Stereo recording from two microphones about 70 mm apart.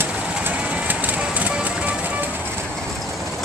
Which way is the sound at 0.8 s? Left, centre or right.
Right.